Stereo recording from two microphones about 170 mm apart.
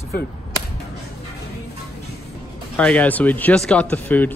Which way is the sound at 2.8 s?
10° left (ahead or behind).